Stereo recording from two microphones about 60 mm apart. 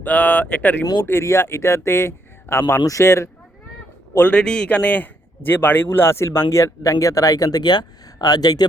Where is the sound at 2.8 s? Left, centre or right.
Left.